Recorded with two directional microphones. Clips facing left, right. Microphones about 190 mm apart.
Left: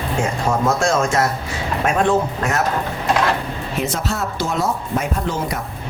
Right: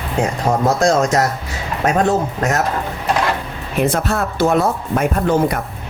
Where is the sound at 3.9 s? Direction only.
55° right (ahead or behind).